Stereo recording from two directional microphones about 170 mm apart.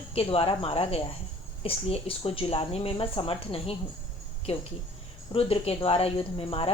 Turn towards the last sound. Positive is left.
turn(degrees=35)  # may be behind; listen again after turning